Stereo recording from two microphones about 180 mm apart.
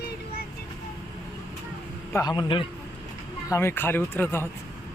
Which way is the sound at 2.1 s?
20° left (ahead or behind).